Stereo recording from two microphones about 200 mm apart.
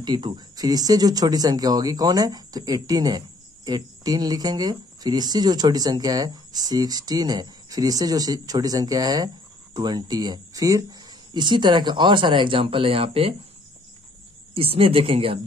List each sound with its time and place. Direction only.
0.0 s speech: 20° right (ahead or behind)
14.5 s speech: 30° right (ahead or behind)